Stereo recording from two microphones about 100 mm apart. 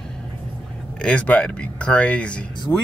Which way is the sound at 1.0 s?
15° left (ahead or behind).